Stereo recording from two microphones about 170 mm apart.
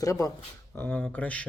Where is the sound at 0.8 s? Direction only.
10° left (ahead or behind).